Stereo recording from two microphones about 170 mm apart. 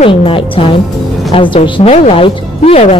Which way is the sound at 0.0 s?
35° left (ahead or behind).